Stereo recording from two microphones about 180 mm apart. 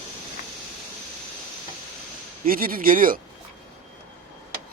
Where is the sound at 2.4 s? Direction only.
55° right (ahead or behind).